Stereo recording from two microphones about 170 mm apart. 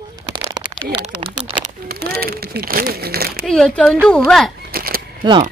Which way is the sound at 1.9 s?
65° right (ahead or behind).